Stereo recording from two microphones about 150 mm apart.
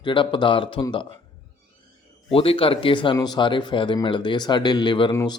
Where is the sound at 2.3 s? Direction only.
40° left (ahead or behind).